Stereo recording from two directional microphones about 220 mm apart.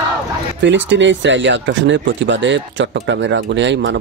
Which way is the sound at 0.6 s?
55° right (ahead or behind).